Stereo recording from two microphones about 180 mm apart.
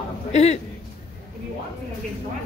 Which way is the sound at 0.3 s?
40° left (ahead or behind).